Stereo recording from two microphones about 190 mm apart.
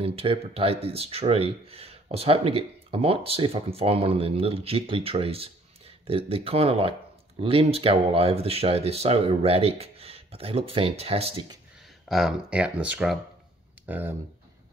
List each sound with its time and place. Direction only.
0.0 s speech: 30° right (ahead or behind)
12.1 s speech: centre (ahead or behind)